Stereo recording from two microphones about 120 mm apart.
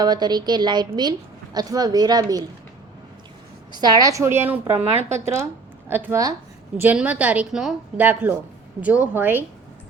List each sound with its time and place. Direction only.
0.0 s a woman's voice: 35° right (ahead or behind)
3.7 s a woman's voice: 35° right (ahead or behind); by 4.6 s 15° right (ahead or behind)
4.8 s speech: 65° right (ahead or behind)
5.9 s a woman's voice: 15° right (ahead or behind)